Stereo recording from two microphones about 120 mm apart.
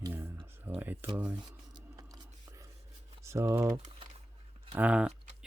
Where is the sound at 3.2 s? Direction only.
25° right (ahead or behind).